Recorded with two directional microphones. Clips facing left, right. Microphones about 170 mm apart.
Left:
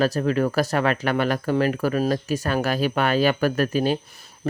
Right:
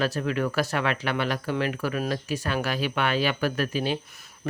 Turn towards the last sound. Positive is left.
turn(degrees=45)  # may be behind; listen again after turning